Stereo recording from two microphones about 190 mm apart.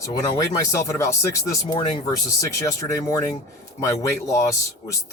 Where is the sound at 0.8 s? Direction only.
15° left (ahead or behind).